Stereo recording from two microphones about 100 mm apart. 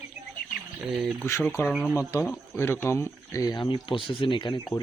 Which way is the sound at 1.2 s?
20° left (ahead or behind).